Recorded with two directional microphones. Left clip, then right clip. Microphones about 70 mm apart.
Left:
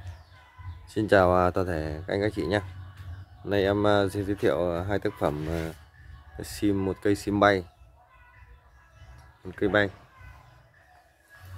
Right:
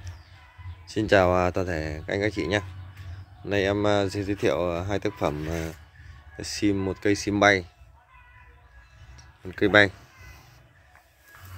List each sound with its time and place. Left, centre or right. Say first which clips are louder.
0.8 s speech: right 1 dB; centre
6.3 s speech: right 2 dB; centre
9.7 s speech: right 6 dB; right